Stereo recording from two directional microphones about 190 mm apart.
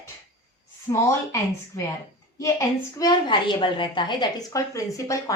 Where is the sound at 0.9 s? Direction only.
15° left (ahead or behind).